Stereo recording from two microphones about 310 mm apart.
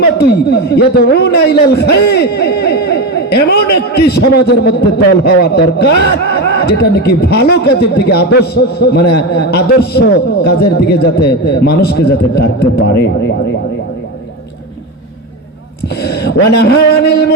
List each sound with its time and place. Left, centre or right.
0.0 s a man's voice: left
6.5 s a sound: left
6.9 s a man's voice: left
16.0 s a man's voice: left